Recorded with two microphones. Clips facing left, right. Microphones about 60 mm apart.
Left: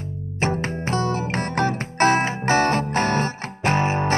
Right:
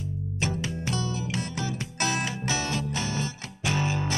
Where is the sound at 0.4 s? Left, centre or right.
Left.